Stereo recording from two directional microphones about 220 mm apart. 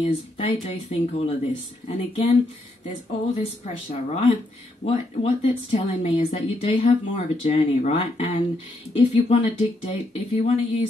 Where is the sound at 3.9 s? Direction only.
30° left (ahead or behind).